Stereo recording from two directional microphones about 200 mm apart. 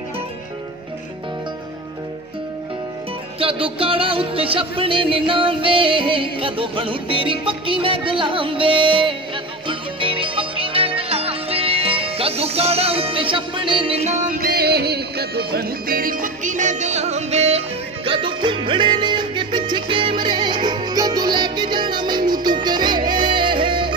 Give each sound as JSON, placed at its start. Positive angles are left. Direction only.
{"t": 3.3, "sound": "music", "side_deg": -25}
{"t": 14.4, "sound": "music", "side_deg": -55}